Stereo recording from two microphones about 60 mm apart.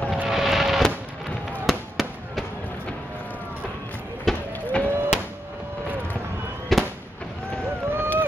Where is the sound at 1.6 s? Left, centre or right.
Centre.